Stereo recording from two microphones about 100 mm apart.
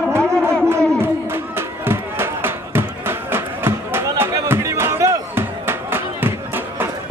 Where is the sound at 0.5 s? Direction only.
25° right (ahead or behind).